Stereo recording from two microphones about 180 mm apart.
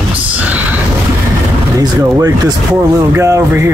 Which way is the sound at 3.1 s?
15° right (ahead or behind).